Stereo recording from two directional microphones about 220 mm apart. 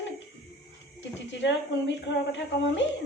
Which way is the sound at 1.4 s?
55° left (ahead or behind).